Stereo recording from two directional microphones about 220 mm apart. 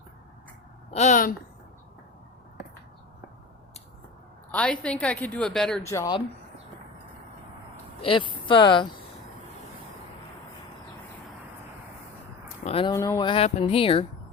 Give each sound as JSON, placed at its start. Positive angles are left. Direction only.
{"t": 0.9, "sound": "speech", "side_deg": 35}
{"t": 4.5, "sound": "speech", "side_deg": 5}
{"t": 5.9, "sound": "speech", "side_deg": 15}
{"t": 8.0, "sound": "speech", "side_deg": 25}
{"t": 12.6, "sound": "speech", "side_deg": 25}